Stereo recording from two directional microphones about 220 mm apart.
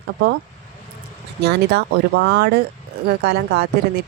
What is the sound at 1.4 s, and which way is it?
A woman's voice, 50° right (ahead or behind).